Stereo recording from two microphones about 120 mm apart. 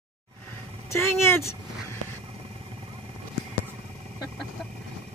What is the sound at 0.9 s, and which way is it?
Speech, 20° left (ahead or behind).